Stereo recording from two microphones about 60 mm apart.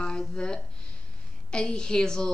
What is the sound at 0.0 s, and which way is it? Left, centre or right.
A woman's voice, centre.